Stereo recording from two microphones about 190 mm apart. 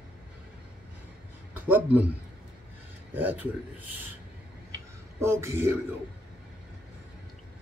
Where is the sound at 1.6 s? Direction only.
10° right (ahead or behind).